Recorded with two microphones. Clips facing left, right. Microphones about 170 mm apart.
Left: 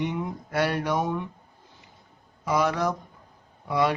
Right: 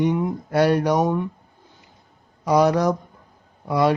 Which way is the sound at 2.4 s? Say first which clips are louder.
Right 7 dB; 40° right (ahead or behind).